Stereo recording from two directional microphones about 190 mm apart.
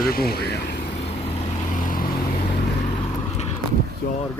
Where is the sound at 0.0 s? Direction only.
50° left (ahead or behind).